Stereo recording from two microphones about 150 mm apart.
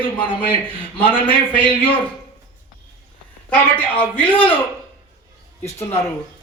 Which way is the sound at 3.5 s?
10° left (ahead or behind).